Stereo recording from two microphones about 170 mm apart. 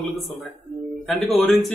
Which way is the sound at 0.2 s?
Centre (ahead or behind).